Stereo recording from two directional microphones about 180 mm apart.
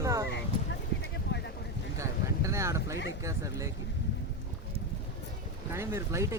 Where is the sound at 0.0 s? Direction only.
15° right (ahead or behind).